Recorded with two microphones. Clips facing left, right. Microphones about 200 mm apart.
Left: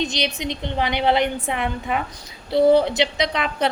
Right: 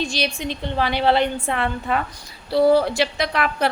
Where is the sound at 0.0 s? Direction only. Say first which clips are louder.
Even; 20° left (ahead or behind).